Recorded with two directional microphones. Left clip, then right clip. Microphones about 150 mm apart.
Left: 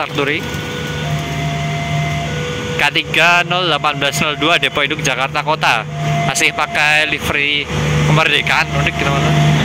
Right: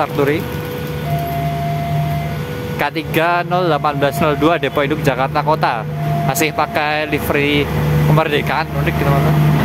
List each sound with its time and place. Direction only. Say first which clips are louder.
3.2 s speech: left 2 dB; 15° right (ahead or behind)